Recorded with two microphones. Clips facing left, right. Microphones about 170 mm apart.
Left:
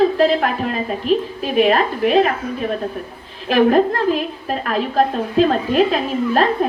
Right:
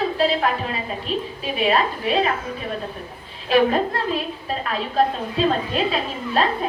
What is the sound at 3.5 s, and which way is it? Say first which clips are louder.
Speech: left 4 dB; 55° left (ahead or behind).